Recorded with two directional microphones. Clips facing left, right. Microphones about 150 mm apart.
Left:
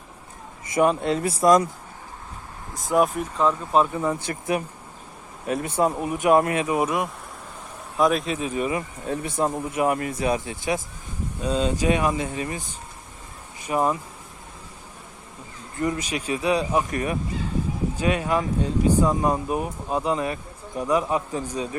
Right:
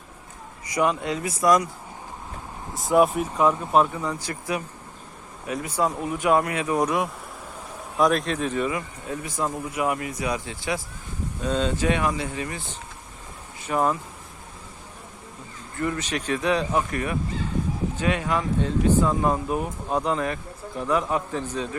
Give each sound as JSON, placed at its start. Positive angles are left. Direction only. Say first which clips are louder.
{"t": 0.8, "sound": "speech", "louder": "left 3 dB", "side_deg": 40}
{"t": 2.7, "sound": "speech", "louder": "right 2 dB", "side_deg": 0}
{"t": 4.0, "sound": "speech", "louder": "left 4 dB", "side_deg": 25}
{"t": 6.7, "sound": "speech", "louder": "even", "side_deg": 5}
{"t": 9.4, "sound": "speech", "louder": "left 3 dB", "side_deg": 30}
{"t": 11.4, "sound": "speech", "louder": "left 1 dB", "side_deg": 10}
{"t": 13.7, "sound": "speech", "louder": "left 1 dB", "side_deg": 10}
{"t": 15.8, "sound": "speech", "louder": "left 1 dB", "side_deg": 15}
{"t": 16.9, "sound": "speech", "louder": "left 1 dB", "side_deg": 20}